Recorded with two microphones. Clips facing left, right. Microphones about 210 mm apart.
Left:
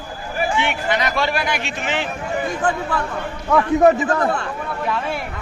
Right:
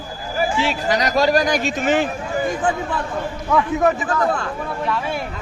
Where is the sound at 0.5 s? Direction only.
35° right (ahead or behind).